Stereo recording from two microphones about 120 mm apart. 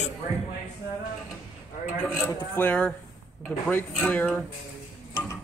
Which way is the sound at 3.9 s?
15° left (ahead or behind).